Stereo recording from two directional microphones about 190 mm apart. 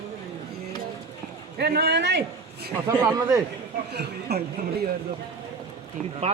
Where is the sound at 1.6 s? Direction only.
60° right (ahead or behind).